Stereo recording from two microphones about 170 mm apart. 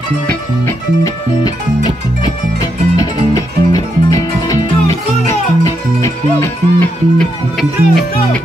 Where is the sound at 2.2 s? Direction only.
20° left (ahead or behind).